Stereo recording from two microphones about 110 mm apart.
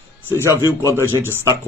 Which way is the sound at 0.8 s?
25° right (ahead or behind).